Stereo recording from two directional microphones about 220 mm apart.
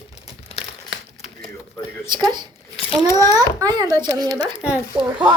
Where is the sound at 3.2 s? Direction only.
15° right (ahead or behind).